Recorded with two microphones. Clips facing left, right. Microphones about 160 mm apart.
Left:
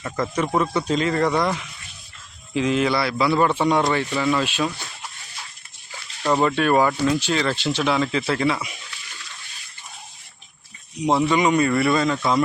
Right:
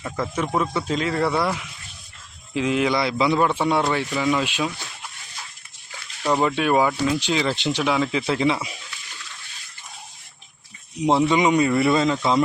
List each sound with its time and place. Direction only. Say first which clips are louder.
0.0 s speech: left 2 dB; 5° right (ahead or behind); by 3.3 s 20° right (ahead or behind)
3.3 s speech: left 4 dB; 5° right (ahead or behind)
6.2 s speech: left 1 dB; 10° right (ahead or behind)
11.0 s speech: right 1 dB; 20° right (ahead or behind)